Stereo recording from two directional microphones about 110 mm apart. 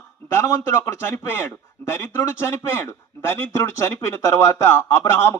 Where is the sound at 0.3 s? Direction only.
25° left (ahead or behind).